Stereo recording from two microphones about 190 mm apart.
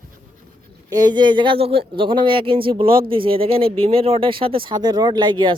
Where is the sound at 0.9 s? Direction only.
20° right (ahead or behind).